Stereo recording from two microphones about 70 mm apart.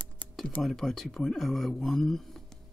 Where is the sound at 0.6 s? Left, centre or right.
Centre.